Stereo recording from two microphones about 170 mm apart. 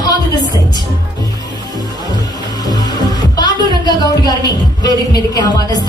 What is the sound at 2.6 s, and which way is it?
Speech, 25° left (ahead or behind).